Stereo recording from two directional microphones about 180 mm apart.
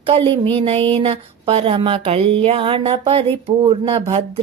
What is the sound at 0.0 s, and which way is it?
Speech, 30° right (ahead or behind).